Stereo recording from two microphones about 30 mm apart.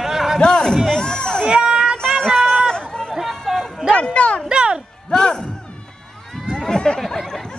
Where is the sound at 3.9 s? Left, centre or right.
Left.